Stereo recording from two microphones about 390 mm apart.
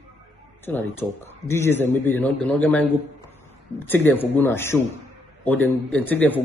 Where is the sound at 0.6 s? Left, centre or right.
Centre.